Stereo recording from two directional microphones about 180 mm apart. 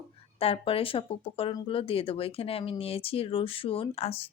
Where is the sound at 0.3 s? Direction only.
30° left (ahead or behind).